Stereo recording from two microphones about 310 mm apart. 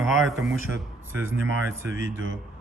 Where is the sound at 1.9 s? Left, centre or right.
Right.